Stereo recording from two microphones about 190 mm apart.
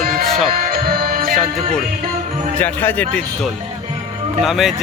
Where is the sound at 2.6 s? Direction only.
10° left (ahead or behind).